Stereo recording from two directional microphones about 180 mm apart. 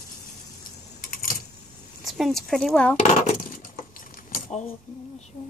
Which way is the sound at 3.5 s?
50° left (ahead or behind).